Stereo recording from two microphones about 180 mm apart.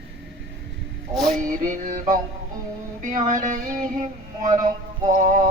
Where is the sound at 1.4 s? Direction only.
45° right (ahead or behind).